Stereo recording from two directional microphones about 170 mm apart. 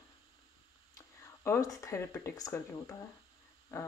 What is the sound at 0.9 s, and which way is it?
Speech, 15° left (ahead or behind).